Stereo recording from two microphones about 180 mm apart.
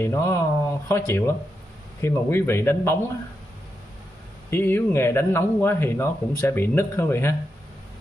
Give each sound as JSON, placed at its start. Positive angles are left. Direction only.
{"t": 0.0, "sound": "speech", "side_deg": 15}
{"t": 4.5, "sound": "speech", "side_deg": 15}